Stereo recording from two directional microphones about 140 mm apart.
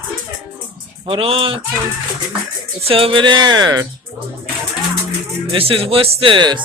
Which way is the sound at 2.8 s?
45° right (ahead or behind).